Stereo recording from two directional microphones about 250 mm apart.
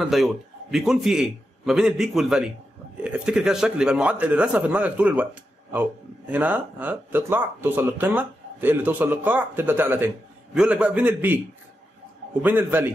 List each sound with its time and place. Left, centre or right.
0.0 s a man's voice: centre
12.4 s speech: centre